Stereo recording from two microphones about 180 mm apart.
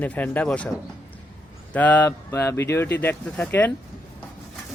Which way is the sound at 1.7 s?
10° left (ahead or behind).